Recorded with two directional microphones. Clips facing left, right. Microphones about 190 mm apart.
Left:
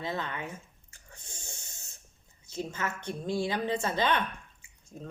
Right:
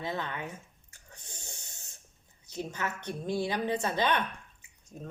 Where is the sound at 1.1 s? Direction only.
15° right (ahead or behind).